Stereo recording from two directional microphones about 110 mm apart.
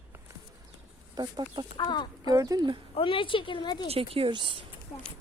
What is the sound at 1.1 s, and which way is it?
Speech, 40° right (ahead or behind).